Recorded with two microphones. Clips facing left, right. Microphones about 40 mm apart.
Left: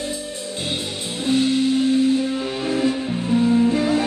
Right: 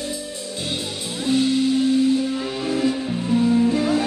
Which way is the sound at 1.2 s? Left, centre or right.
Left.